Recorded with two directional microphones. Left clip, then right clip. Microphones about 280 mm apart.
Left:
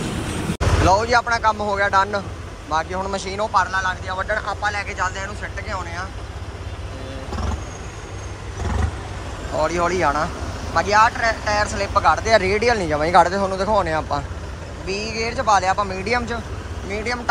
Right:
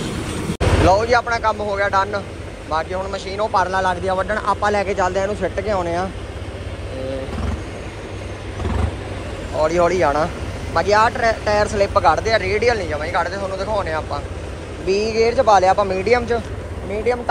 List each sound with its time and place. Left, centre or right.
0.0 s vehicle: centre
0.8 s speech: centre
9.6 s speech: centre
14.9 s speech: right
15.2 s speech: centre